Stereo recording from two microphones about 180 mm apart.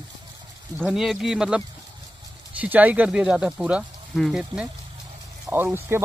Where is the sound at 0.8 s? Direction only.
Centre (ahead or behind).